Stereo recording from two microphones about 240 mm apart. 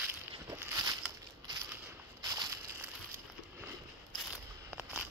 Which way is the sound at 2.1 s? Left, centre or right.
Centre.